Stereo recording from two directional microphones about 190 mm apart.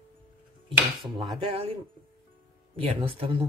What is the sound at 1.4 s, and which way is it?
Speech, 30° right (ahead or behind).